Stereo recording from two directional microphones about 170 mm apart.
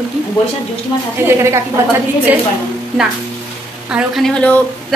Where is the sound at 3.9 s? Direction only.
5° right (ahead or behind).